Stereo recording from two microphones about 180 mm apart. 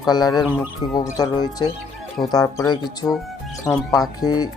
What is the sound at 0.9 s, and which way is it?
Speech, 20° left (ahead or behind).